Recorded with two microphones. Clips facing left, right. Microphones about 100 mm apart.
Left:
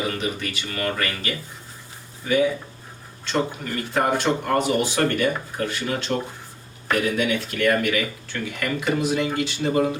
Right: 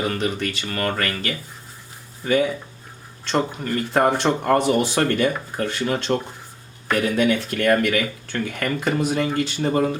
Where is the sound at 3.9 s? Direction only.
50° right (ahead or behind).